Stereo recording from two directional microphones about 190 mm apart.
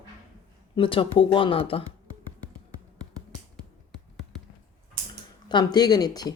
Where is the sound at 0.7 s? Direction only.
30° left (ahead or behind).